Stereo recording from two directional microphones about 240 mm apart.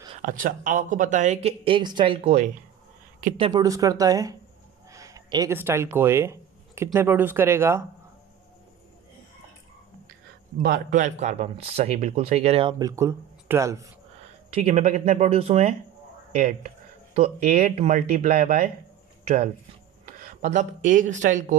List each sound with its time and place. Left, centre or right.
0.2 s speech: right; by 7.8 s centre
10.6 s speech: right; by 13.8 s centre
14.5 s speech: right